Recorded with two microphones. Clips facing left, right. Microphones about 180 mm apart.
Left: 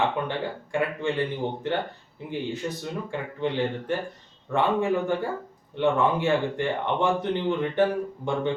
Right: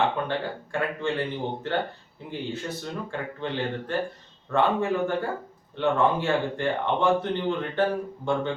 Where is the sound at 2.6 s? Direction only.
15° left (ahead or behind).